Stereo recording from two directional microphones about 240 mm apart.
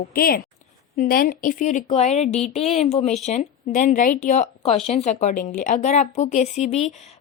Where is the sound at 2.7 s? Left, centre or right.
Left.